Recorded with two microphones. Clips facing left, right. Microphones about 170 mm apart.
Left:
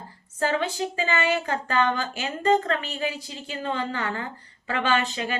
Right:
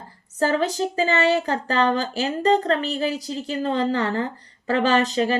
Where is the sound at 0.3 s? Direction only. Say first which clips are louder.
Right 4 dB; 40° right (ahead or behind).